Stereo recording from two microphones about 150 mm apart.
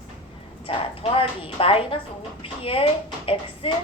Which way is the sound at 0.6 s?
35° left (ahead or behind).